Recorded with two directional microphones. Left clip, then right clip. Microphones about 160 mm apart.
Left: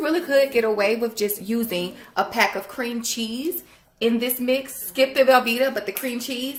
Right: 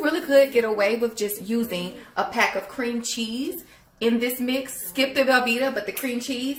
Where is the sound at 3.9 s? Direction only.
45° left (ahead or behind).